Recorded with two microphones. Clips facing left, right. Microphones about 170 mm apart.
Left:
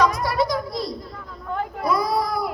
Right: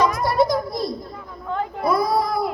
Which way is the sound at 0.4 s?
25° right (ahead or behind).